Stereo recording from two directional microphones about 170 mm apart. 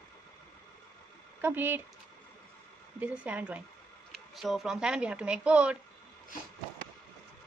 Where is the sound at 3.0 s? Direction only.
10° right (ahead or behind).